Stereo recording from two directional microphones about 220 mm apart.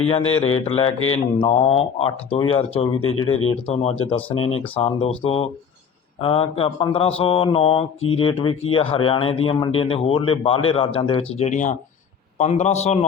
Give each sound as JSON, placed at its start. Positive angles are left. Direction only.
{"t": 0.1, "sound": "speech", "side_deg": 25}
{"t": 0.9, "sound": "speech", "side_deg": 70}
{"t": 1.4, "sound": "speech", "side_deg": 25}
{"t": 3.0, "sound": "speech", "side_deg": 70}
{"t": 4.0, "sound": "a man's voice", "side_deg": 25}